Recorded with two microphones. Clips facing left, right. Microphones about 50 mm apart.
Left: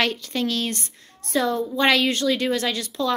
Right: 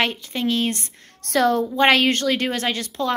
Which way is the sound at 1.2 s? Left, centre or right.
Right.